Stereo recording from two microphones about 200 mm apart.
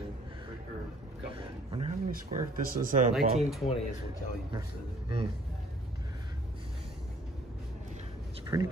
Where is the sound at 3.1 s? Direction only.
Centre (ahead or behind).